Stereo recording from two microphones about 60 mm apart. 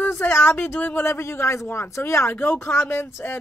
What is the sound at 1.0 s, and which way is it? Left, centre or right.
Speech, left.